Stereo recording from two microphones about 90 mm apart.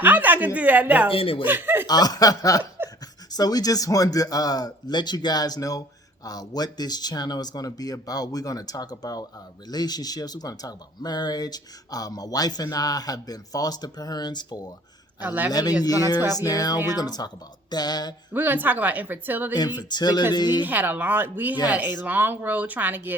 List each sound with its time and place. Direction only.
0.0 s a woman's voice: 20° right (ahead or behind)
1.1 s speech: 90° left
1.5 s speech: 20° right (ahead or behind)
1.9 s chuckle: 45° left (ahead or behind)
3.3 s speech: 45° left (ahead or behind)
15.2 s speech: 20° right (ahead or behind)
15.8 s speech: 45° left (ahead or behind)
18.3 s speech: 20° right (ahead or behind)
19.5 s speech: 50° left (ahead or behind)
20.7 s speech: 20° right (ahead or behind)